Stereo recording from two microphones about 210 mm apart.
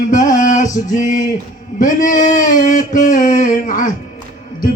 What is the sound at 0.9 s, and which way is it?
Male singing, 35° left (ahead or behind).